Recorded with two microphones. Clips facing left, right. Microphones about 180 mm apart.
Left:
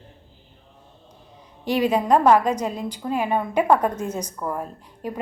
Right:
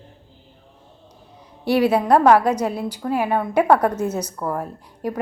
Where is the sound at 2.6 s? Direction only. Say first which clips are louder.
Right 3 dB; 10° right (ahead or behind).